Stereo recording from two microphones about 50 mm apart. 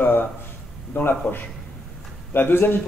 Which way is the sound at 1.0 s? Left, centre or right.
Left.